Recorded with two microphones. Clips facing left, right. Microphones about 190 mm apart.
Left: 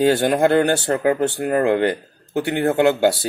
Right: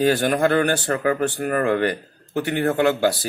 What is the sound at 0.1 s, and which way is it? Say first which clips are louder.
Speech: left 3 dB; 25° left (ahead or behind).